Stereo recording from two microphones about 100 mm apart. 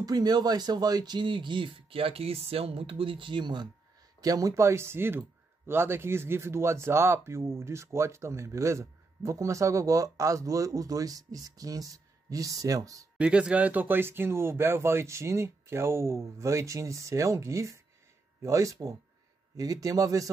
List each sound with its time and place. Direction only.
0.0 s speech: 40° right (ahead or behind)
4.2 s speech: 35° right (ahead or behind)
13.2 s speech: 10° right (ahead or behind); by 20.2 s 35° right (ahead or behind)